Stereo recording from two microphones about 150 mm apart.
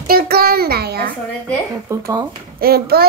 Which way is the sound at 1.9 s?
20° right (ahead or behind).